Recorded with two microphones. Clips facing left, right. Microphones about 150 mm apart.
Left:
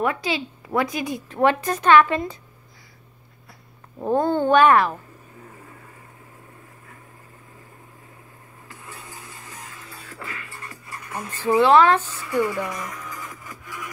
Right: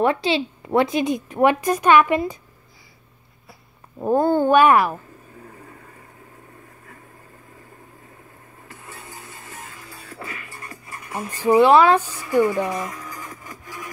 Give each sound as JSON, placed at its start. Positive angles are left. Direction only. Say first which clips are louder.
{"t": 0.0, "sound": "a woman's voice", "louder": "right 5 dB", "side_deg": -30}
{"t": 4.0, "sound": "a woman's voice", "louder": "right 3 dB", "side_deg": -10}
{"t": 8.8, "sound": "music", "louder": "right 1 dB", "side_deg": -20}
{"t": 11.1, "sound": "a woman's voice", "louder": "right 4 dB", "side_deg": -15}
{"t": 12.3, "sound": "music", "louder": "right 5 dB", "side_deg": -25}